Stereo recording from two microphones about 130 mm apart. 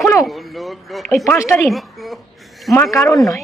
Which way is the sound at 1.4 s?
20° left (ahead or behind).